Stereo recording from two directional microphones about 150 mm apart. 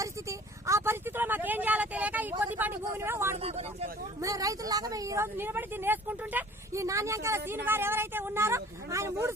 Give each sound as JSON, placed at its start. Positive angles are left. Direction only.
{"t": 0.0, "sound": "a sound", "side_deg": -20}
{"t": 2.4, "sound": "speech", "side_deg": -10}
{"t": 3.3, "sound": "speech", "side_deg": -45}
{"t": 4.2, "sound": "speech", "side_deg": -20}